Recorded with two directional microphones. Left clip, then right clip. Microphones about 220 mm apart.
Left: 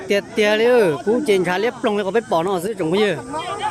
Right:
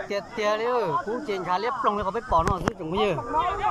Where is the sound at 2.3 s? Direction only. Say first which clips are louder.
Left 4 dB; 15° left (ahead or behind).